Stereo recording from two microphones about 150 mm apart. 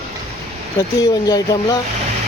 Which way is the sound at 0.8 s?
25° left (ahead or behind).